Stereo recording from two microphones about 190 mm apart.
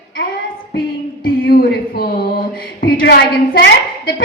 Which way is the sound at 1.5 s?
50° left (ahead or behind).